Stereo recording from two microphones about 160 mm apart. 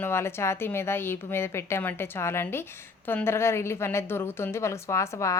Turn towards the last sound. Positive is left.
turn(degrees=20)  # may be behind; listen again after turning